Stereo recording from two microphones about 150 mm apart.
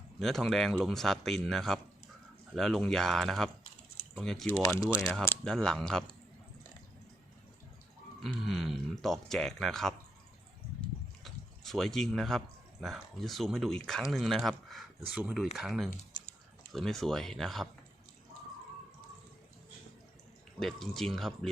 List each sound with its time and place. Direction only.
0.2 s speech: centre (ahead or behind)
4.6 s speech: 25° left (ahead or behind)
5.2 s speech: 10° left (ahead or behind)
8.2 s speech: centre (ahead or behind)
10.8 s a sound: centre (ahead or behind)
12.8 s speech: centre (ahead or behind)
20.6 s speech: 5° left (ahead or behind)